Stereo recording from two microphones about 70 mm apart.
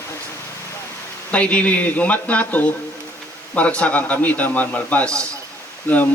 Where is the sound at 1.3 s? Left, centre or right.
Centre.